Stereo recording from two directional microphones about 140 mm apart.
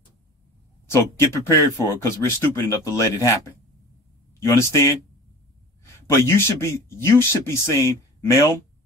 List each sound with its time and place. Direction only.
0.8 s speech: 20° left (ahead or behind)
4.4 s speech: 20° left (ahead or behind)
5.9 s speech: 20° left (ahead or behind)